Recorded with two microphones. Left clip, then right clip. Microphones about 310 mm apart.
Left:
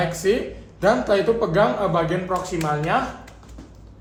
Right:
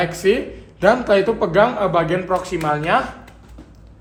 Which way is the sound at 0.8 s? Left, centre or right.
Centre.